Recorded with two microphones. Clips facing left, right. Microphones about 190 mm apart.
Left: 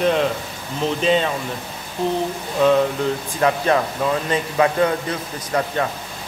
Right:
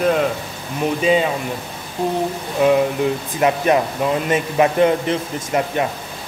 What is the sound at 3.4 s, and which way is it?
A man's voice, 15° right (ahead or behind).